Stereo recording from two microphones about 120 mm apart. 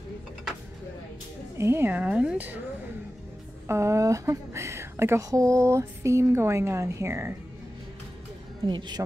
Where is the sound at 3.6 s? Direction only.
25° right (ahead or behind).